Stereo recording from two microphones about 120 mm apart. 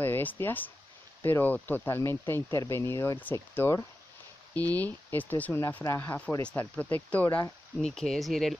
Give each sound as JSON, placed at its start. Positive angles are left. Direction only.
{"t": 0.0, "sound": "speech", "side_deg": 15}
{"t": 7.8, "sound": "speech", "side_deg": 5}